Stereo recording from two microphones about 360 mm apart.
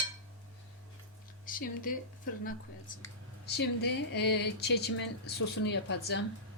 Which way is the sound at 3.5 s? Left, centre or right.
Left.